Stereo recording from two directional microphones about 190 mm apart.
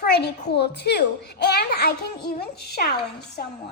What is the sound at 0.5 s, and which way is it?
A child's voice, 60° left (ahead or behind).